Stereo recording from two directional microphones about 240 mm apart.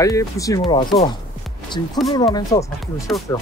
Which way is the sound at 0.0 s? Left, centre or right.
Centre.